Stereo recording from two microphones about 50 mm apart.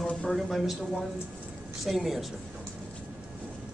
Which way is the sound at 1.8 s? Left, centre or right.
Centre.